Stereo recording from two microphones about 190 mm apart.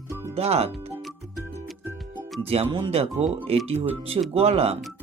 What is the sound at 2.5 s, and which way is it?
Speech, 30° right (ahead or behind).